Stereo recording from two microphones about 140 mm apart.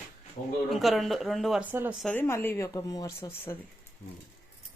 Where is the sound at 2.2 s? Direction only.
15° left (ahead or behind).